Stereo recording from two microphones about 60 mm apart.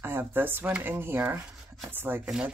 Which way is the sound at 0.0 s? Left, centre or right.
Right.